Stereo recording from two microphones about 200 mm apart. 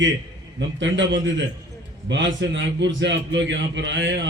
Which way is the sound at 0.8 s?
65° right (ahead or behind).